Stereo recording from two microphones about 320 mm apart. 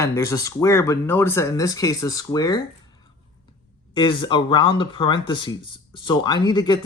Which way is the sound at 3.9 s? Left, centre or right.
Centre.